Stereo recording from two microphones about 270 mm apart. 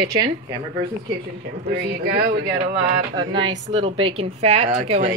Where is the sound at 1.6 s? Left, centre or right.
Right.